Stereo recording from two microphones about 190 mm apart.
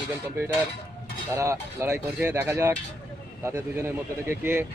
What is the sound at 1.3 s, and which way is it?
Speech, 15° right (ahead or behind).